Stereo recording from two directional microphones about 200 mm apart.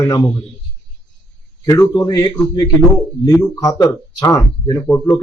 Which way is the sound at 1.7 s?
15° left (ahead or behind).